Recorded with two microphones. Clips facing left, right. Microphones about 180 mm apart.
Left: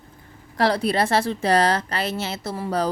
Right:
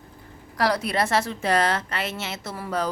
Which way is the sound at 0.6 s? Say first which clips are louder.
Left 3 dB; 30° left (ahead or behind).